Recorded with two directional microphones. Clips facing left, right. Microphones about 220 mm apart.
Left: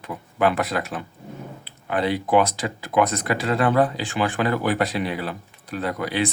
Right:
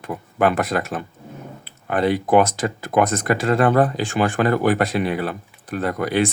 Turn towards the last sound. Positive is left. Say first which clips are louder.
# right 4 dB
turn(degrees=-50)  # may be behind; listen again after turning